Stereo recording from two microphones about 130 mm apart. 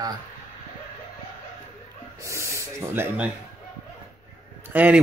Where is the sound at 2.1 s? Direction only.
20° right (ahead or behind).